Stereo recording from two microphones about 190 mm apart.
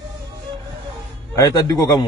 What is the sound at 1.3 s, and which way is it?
Speech, 20° left (ahead or behind).